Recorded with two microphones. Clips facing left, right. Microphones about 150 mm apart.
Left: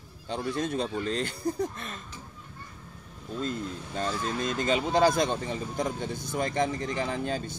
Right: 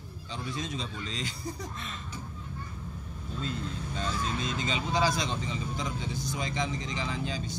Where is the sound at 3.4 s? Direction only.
45° left (ahead or behind).